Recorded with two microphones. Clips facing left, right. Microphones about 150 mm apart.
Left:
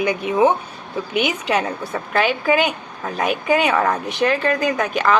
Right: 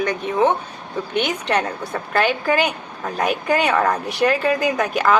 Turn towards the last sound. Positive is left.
turn(degrees=-5)  # may be behind; listen again after turning